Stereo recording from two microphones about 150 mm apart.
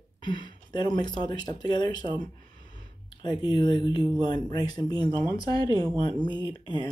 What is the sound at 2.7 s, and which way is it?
Speech, 30° left (ahead or behind).